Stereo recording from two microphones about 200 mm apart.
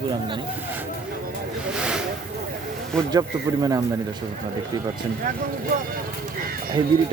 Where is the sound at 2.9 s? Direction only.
5° left (ahead or behind).